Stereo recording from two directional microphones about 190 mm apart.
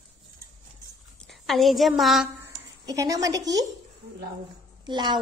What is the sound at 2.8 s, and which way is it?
Speech, 20° right (ahead or behind).